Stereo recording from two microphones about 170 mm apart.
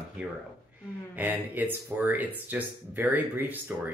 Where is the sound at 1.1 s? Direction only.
10° right (ahead or behind).